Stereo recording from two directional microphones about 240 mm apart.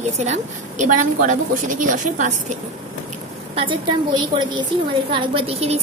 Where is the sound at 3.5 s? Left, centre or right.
Right.